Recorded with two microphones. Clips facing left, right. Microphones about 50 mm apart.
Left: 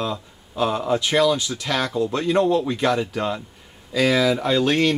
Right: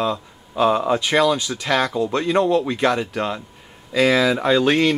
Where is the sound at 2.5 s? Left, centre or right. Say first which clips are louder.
Right 2 dB; centre.